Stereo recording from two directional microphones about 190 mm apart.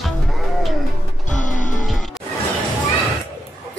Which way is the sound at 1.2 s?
40° left (ahead or behind).